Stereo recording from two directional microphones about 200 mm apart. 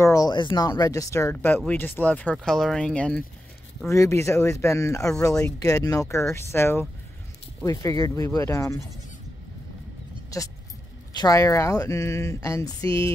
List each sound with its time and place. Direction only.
0.0 s speech: 15° left (ahead or behind)
3.9 s speech: 15° left (ahead or behind)
10.3 s speech: 15° left (ahead or behind)